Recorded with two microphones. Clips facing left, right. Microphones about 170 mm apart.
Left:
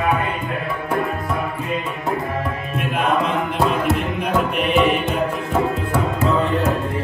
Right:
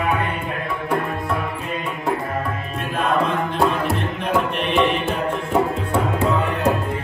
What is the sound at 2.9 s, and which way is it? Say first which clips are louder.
Music: even; 20° left (ahead or behind).